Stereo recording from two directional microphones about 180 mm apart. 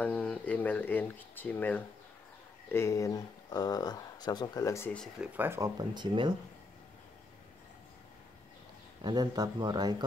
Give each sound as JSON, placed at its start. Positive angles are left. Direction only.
{"t": 0.0, "sound": "speech", "side_deg": 5}
{"t": 5.3, "sound": "speech", "side_deg": -10}
{"t": 9.0, "sound": "speech", "side_deg": -25}